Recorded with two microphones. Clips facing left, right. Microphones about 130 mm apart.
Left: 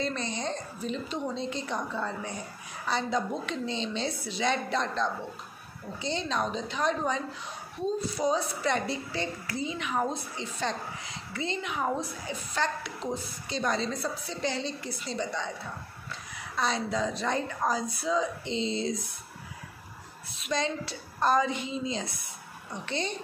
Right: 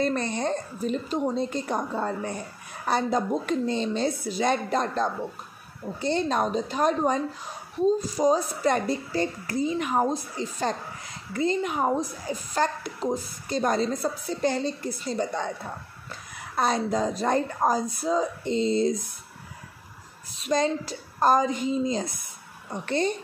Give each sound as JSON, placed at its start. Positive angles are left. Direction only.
{"t": 0.0, "sound": "a woman's voice", "side_deg": -55}
{"t": 20.2, "sound": "a woman's voice", "side_deg": -40}